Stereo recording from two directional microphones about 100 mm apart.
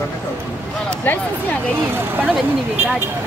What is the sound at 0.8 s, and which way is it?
Speech, 20° left (ahead or behind).